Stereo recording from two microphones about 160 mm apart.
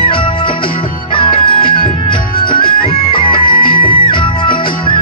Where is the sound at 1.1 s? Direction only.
35° left (ahead or behind).